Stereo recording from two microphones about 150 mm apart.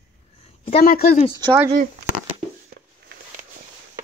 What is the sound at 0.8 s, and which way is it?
Speech, 90° left.